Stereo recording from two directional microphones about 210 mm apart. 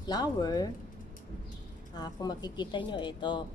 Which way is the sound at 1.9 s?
20° left (ahead or behind).